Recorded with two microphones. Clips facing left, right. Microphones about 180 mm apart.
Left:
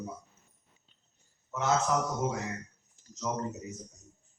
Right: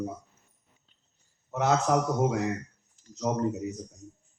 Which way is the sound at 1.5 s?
60° right (ahead or behind).